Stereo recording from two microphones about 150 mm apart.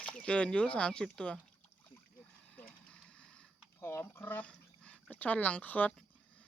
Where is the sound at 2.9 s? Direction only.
5° left (ahead or behind).